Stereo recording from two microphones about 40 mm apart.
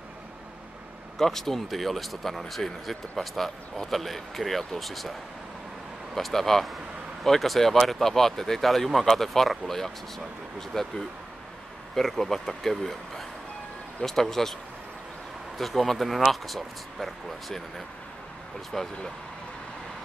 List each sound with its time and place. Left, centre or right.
1.1 s speech: centre
6.1 s speech: centre
15.5 s speech: centre